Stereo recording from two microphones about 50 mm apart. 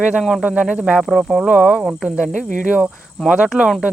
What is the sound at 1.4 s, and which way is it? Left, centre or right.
Speech, centre.